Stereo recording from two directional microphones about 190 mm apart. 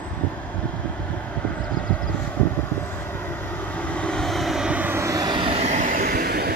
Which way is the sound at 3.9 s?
5° left (ahead or behind).